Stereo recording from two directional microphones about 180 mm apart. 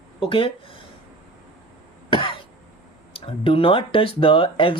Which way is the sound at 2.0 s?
30° left (ahead or behind).